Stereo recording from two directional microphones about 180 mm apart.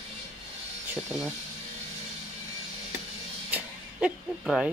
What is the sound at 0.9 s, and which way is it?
Speech, 5° right (ahead or behind).